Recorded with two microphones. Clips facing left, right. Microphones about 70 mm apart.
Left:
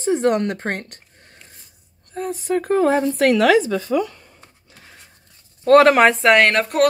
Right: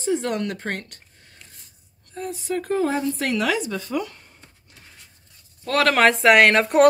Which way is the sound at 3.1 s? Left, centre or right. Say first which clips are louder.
Left 8 dB; left.